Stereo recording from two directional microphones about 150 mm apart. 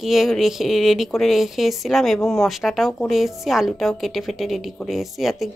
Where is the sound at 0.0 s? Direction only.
Centre (ahead or behind).